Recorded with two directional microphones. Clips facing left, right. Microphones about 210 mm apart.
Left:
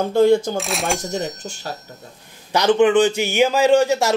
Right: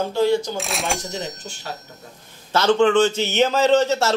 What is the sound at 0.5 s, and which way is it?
Speech, centre (ahead or behind).